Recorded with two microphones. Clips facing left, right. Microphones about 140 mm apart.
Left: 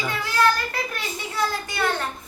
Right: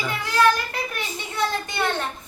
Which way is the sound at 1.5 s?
25° right (ahead or behind).